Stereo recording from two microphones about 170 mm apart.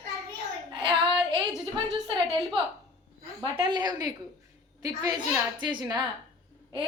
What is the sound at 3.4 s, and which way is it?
A woman's voice, 25° right (ahead or behind).